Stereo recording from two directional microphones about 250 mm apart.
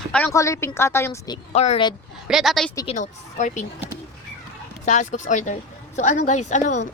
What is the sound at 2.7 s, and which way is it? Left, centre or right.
Speech, left.